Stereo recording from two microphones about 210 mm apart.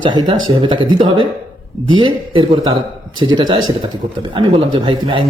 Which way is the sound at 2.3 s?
25° right (ahead or behind).